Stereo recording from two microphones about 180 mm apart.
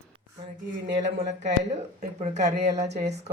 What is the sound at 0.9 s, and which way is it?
Speech, 40° right (ahead or behind).